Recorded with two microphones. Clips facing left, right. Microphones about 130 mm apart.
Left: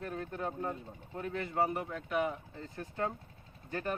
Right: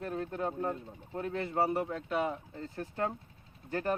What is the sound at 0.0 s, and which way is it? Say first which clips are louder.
Speech: right 3 dB; 25° right (ahead or behind).